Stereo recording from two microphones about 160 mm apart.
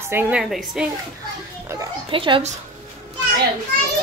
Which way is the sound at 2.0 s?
35° right (ahead or behind).